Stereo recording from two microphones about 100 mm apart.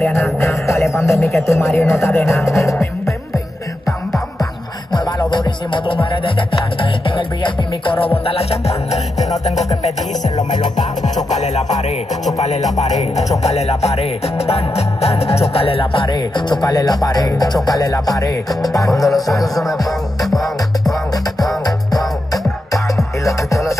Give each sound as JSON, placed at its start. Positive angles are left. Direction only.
{"t": 0.1, "sound": "speech", "side_deg": 25}
{"t": 4.9, "sound": "music", "side_deg": 50}
{"t": 13.1, "sound": "music", "side_deg": 90}
{"t": 16.2, "sound": "speech", "side_deg": 50}
{"t": 18.9, "sound": "music", "side_deg": 0}
{"t": 21.6, "sound": "music", "side_deg": 40}